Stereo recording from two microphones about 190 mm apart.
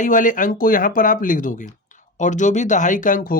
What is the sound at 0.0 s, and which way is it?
Speech, 45° left (ahead or behind).